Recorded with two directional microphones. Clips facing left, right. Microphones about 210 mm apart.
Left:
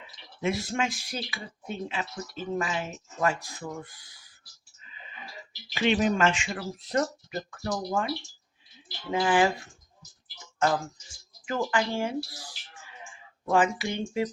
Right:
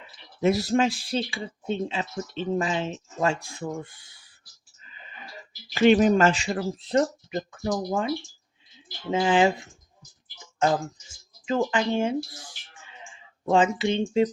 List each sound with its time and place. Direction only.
0.4 s speech: 40° right (ahead or behind)
5.7 s speech: 45° right (ahead or behind); by 9.6 s 20° right (ahead or behind)
11.4 s speech: 20° right (ahead or behind)